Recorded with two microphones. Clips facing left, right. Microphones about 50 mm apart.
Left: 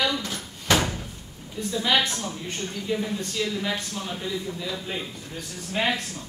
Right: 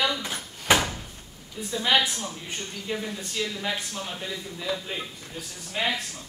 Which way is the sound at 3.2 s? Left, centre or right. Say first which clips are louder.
Left 3 dB; centre.